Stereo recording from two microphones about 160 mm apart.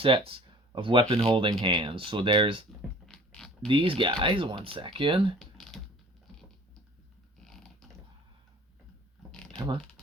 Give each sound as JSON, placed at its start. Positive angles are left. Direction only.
{"t": 0.0, "sound": "speech", "side_deg": -35}
{"t": 1.3, "sound": "speech", "side_deg": -25}
{"t": 3.1, "sound": "mechanisms", "side_deg": 5}
{"t": 3.7, "sound": "speech", "side_deg": -30}
{"t": 5.4, "sound": "typing", "side_deg": 0}
{"t": 7.4, "sound": "a sound", "side_deg": 0}
{"t": 9.6, "sound": "speech", "side_deg": -30}